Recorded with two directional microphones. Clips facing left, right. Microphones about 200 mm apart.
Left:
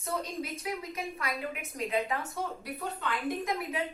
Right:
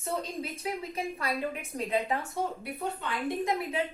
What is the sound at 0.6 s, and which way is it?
A woman's voice, 30° right (ahead or behind).